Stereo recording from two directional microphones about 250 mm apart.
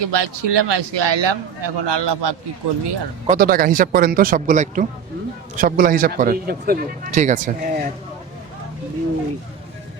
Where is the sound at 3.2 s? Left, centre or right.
Right.